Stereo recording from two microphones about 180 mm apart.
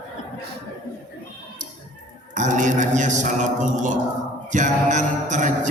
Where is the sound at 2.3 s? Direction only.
45° right (ahead or behind).